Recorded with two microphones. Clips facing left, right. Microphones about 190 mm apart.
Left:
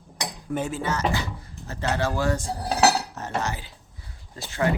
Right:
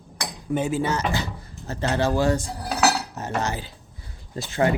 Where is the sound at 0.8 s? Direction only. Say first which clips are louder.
Right 1 dB; 30° right (ahead or behind).